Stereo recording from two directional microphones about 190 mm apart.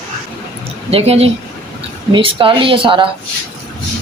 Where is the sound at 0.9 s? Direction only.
30° right (ahead or behind).